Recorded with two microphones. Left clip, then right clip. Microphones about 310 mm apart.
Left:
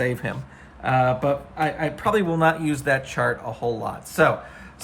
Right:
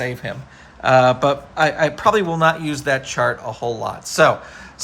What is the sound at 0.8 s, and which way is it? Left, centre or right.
Speech, centre.